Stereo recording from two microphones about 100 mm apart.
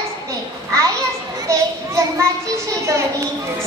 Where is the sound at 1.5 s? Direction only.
30° right (ahead or behind).